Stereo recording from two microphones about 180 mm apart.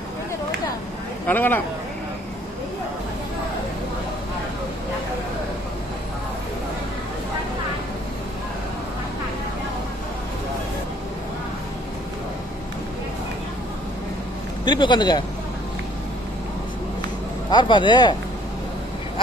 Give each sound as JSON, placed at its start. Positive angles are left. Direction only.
{"t": 1.2, "sound": "speech", "side_deg": 10}
{"t": 14.6, "sound": "speech", "side_deg": 25}
{"t": 17.5, "sound": "speech", "side_deg": 25}